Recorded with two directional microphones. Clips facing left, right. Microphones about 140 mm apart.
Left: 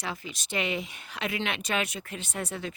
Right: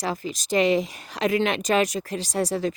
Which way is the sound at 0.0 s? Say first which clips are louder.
Right 8 dB; 40° right (ahead or behind).